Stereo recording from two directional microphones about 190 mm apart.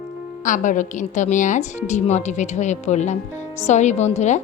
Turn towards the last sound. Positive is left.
turn(degrees=35)  # may be behind; listen again after turning